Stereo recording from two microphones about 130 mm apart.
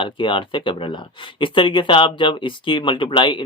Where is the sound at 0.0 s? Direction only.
40° left (ahead or behind).